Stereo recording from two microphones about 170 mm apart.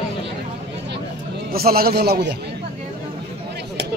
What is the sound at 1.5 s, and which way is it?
Speech, 65° right (ahead or behind).